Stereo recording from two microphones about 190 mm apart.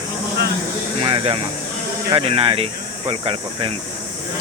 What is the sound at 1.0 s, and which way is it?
Speech, 30° right (ahead or behind).